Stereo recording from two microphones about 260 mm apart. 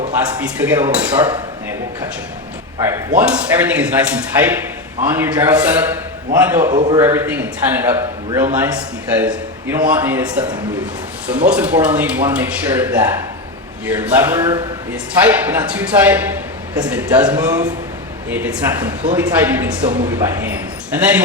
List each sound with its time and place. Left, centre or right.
0.6 s a man's voice: centre
3.2 s a man's voice: centre
6.7 s a man's voice: right
6.9 s a man's voice: centre